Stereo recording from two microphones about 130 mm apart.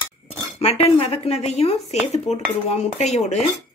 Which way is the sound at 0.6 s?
50° left (ahead or behind).